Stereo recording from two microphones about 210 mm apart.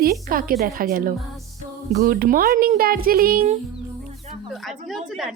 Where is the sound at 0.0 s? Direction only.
45° right (ahead or behind).